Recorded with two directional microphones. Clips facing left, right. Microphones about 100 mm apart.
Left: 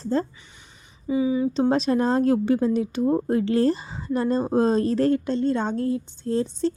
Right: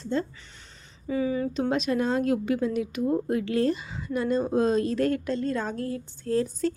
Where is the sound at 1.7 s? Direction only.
35° left (ahead or behind).